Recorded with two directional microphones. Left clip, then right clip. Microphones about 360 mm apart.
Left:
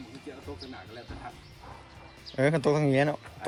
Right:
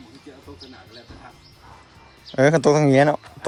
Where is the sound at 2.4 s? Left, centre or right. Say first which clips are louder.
Right 9 dB; centre.